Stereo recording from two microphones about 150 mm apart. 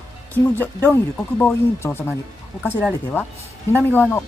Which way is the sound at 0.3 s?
15° left (ahead or behind).